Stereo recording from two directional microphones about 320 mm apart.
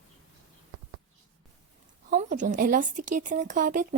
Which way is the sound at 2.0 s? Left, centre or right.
Right.